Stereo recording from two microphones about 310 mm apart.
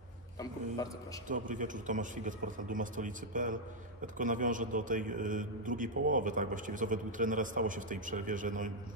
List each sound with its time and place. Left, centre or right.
1.3 s a man's voice: right